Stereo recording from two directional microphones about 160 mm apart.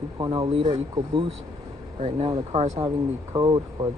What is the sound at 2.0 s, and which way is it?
Speech, 40° right (ahead or behind).